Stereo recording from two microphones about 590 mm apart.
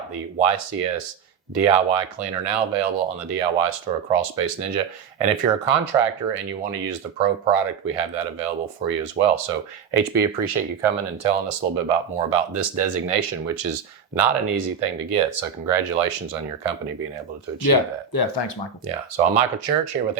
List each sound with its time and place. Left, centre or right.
0.1 s speech: right
17.7 s speech: left
18.9 s speech: right